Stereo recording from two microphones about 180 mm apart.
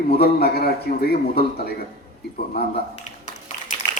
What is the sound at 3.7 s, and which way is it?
Typing, 40° left (ahead or behind).